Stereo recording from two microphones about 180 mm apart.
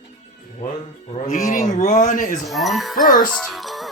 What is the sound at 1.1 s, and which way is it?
A man's voice, 45° left (ahead or behind).